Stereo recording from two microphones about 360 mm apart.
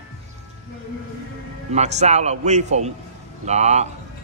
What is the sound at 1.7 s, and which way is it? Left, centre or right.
Speech, centre.